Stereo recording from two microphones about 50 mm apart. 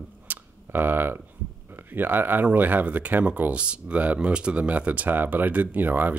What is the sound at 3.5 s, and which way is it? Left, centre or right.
Speech, right.